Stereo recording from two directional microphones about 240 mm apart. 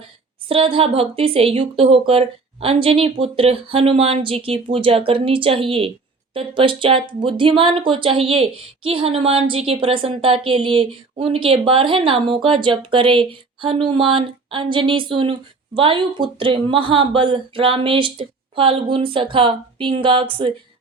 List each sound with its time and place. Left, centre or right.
0.4 s speech: right